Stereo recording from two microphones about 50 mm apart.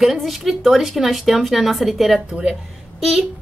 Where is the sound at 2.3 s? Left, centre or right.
Centre.